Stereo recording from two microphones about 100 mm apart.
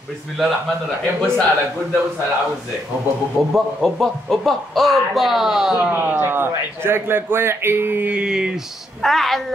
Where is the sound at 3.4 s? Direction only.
Centre (ahead or behind).